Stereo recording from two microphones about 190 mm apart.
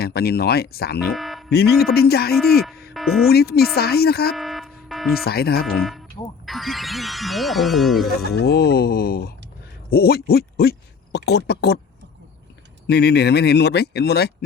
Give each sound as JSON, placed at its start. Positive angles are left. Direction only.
{"t": 0.0, "sound": "speech", "side_deg": 55}
{"t": 1.1, "sound": "music", "side_deg": 0}
{"t": 1.5, "sound": "speech", "side_deg": 55}
{"t": 2.9, "sound": "music", "side_deg": 0}
{"t": 3.2, "sound": "speech", "side_deg": 55}
{"t": 4.4, "sound": "buzzer", "side_deg": 0}
{"t": 5.2, "sound": "speech", "side_deg": 55}
{"t": 6.4, "sound": "speech", "side_deg": 0}
{"t": 8.4, "sound": "speech", "side_deg": 55}
{"t": 12.9, "sound": "speech", "side_deg": 60}